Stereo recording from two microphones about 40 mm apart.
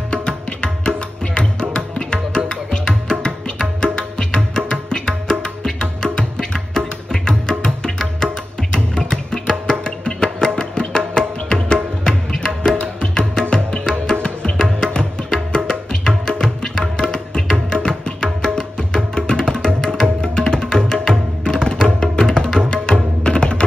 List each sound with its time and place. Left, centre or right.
0.1 s music: left